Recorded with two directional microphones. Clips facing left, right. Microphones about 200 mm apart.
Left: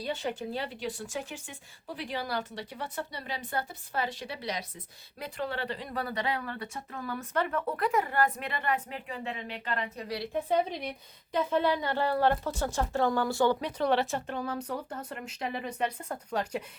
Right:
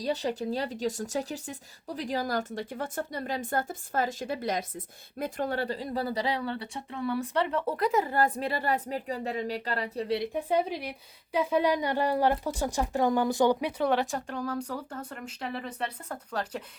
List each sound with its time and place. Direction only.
0.0 s a woman's voice: 40° right (ahead or behind)
10.3 s a woman's voice: 10° right (ahead or behind); by 16.6 s 10° left (ahead or behind)